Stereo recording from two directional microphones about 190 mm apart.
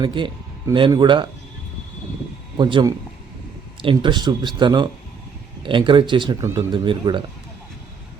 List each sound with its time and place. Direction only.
0.0 s speech: 25° right (ahead or behind)
2.6 s speech: 25° right (ahead or behind)